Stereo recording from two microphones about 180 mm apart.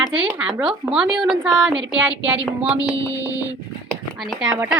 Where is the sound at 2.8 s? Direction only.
20° left (ahead or behind).